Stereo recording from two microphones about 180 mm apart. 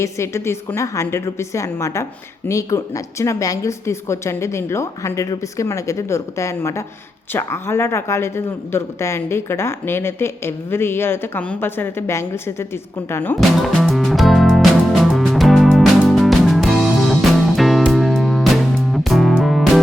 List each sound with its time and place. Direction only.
0.0 s speech: 15° left (ahead or behind)
13.7 s music: centre (ahead or behind)